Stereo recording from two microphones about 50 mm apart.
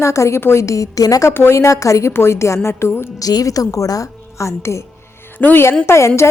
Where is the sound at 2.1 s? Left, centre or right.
Left.